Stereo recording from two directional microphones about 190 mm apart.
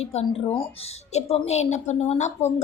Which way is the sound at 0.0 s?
35° left (ahead or behind).